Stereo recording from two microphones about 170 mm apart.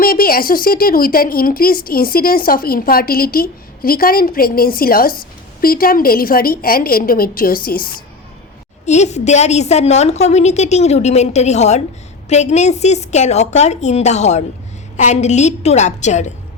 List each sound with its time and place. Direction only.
0.0 s speech: 60° left (ahead or behind)
8.9 s a woman's voice: 40° left (ahead or behind)